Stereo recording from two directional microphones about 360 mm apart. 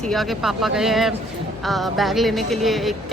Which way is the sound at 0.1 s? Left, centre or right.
Centre.